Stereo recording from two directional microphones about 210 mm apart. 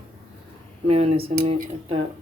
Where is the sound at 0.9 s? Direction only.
30° right (ahead or behind).